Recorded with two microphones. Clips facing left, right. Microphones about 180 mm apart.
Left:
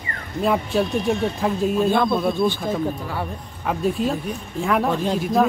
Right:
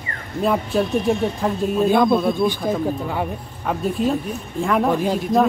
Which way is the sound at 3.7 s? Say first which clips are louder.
Right 1 dB; centre (ahead or behind).